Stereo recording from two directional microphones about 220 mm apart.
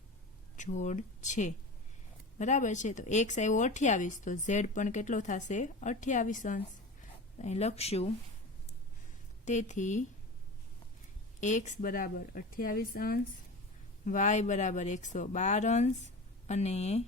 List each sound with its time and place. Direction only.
0.5 s speech: 35° left (ahead or behind)
9.4 s speech: 35° left (ahead or behind)
11.3 s speech: 35° left (ahead or behind)